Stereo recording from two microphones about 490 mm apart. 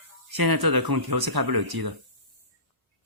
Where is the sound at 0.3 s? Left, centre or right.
Right.